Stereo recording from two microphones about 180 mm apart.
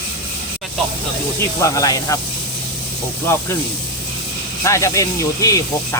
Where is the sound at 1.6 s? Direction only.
20° left (ahead or behind).